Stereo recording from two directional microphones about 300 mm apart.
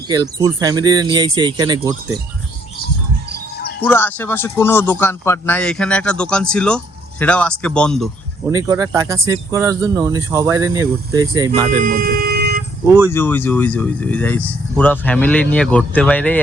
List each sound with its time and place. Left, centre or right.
0.1 s speech: centre
3.8 s a man's voice: centre
8.4 s speech: centre
11.8 s vehicle: right
13.1 s a man's voice: centre